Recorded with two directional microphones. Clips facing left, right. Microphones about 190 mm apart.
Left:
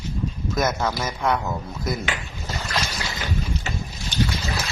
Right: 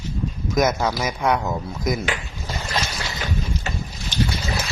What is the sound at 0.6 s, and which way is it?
Speech, 10° right (ahead or behind).